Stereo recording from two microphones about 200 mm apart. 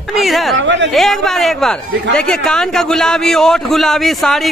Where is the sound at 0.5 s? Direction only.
65° right (ahead or behind).